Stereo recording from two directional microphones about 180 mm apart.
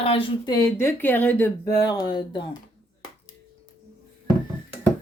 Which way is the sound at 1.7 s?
20° left (ahead or behind).